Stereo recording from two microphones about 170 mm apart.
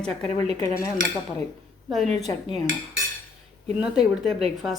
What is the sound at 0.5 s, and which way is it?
Cutlery, 20° left (ahead or behind).